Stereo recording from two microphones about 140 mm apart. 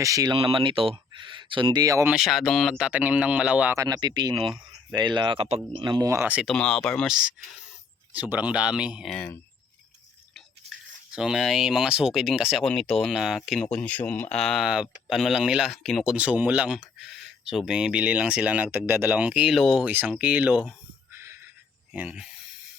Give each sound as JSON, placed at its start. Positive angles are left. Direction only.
{"t": 0.0, "sound": "speech", "side_deg": -25}
{"t": 0.3, "sound": "speech", "side_deg": -40}
{"t": 2.0, "sound": "speech", "side_deg": 0}
{"t": 3.8, "sound": "speech", "side_deg": -30}
{"t": 4.4, "sound": "speech", "side_deg": 0}
{"t": 5.0, "sound": "speech", "side_deg": -35}
{"t": 6.1, "sound": "speech", "side_deg": -15}
{"t": 6.4, "sound": "speech", "side_deg": 5}
{"t": 11.1, "sound": "speech", "side_deg": -5}
{"t": 16.1, "sound": "speech", "side_deg": -10}
{"t": 21.2, "sound": "a sound", "side_deg": -20}
{"t": 21.9, "sound": "speech", "side_deg": -5}